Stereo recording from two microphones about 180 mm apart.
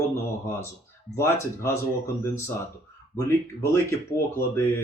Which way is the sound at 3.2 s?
15° left (ahead or behind).